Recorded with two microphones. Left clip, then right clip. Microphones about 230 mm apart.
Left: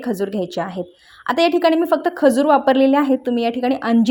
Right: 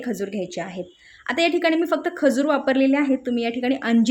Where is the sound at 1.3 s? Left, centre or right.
Centre.